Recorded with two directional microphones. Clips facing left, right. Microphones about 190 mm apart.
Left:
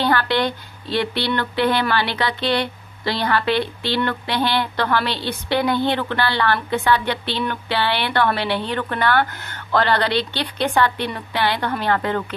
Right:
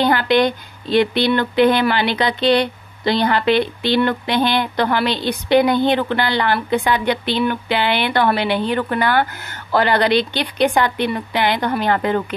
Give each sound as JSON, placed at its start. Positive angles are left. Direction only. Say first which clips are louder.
{"t": 0.0, "sound": "a woman's voice", "louder": "right 4 dB", "side_deg": -15}